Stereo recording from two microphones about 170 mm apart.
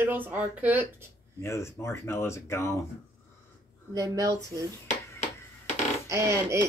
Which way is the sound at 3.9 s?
20° right (ahead or behind).